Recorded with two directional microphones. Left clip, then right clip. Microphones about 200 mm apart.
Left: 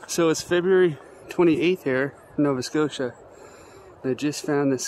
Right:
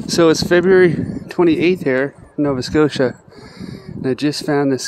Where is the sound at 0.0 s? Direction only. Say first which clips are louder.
Right 9 dB; 30° right (ahead or behind).